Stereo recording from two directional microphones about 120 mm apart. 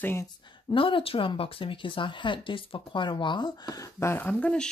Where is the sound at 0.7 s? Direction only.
45° left (ahead or behind).